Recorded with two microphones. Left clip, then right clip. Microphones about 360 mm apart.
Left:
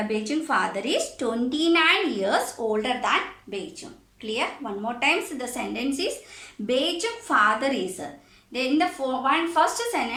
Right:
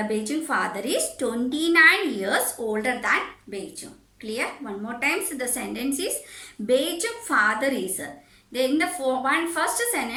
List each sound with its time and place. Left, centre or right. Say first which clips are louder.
0.1 s a woman's voice: left 1 dB; centre